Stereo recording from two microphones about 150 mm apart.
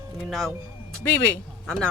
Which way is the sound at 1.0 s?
15° left (ahead or behind).